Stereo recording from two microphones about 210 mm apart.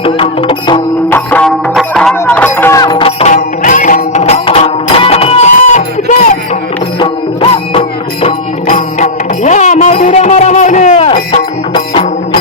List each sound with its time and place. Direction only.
0.0 s music: 25° left (ahead or behind)
1.1 s music: 5° left (ahead or behind); by 11.1 s 35° left (ahead or behind)
11.1 s music: 25° left (ahead or behind)